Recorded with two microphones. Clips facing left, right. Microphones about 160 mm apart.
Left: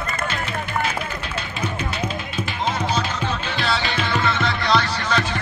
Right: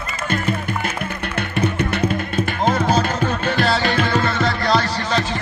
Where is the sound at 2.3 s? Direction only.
50° right (ahead or behind).